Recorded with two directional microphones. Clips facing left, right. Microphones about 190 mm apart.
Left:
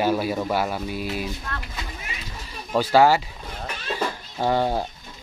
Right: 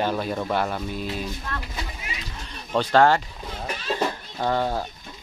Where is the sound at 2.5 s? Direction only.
10° left (ahead or behind).